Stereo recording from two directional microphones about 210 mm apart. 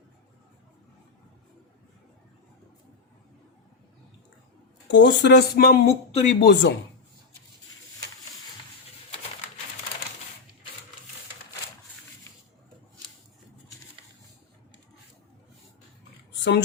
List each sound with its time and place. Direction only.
4.9 s speech: 60° left (ahead or behind)
5.8 s speech: 30° left (ahead or behind)
6.4 s speech: 55° left (ahead or behind)